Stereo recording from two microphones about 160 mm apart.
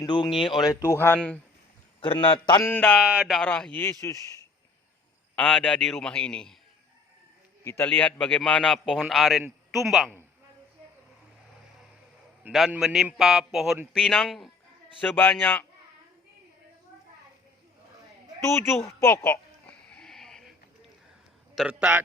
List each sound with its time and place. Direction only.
0.0 s a man's voice: 30° left (ahead or behind)
0.7 s a man's voice: 15° left (ahead or behind)
2.0 s a man's voice: 30° left (ahead or behind)
2.6 s a man's voice: 10° left (ahead or behind)
3.0 s a man's voice: 5° right (ahead or behind)
4.0 s a man's voice: 20° left (ahead or behind)
5.4 s a man's voice: 5° left (ahead or behind)
7.6 s a man's voice: 15° left (ahead or behind); by 10.2 s centre (ahead or behind)
12.4 s a man's voice: centre (ahead or behind)
15.1 s a man's voice: 10° left (ahead or behind)
18.8 s a sound: 20° left (ahead or behind); by 20.5 s 5° left (ahead or behind)
21.5 s a man's voice: 5° right (ahead or behind)